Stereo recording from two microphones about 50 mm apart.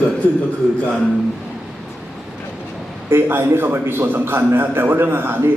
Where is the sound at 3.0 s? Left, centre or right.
Right.